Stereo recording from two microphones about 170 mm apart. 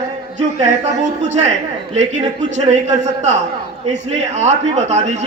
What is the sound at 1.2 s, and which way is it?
Speech, 45° right (ahead or behind).